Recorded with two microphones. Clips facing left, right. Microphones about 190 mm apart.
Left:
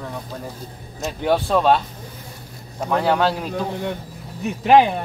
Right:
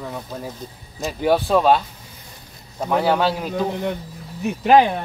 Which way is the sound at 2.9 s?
5° right (ahead or behind).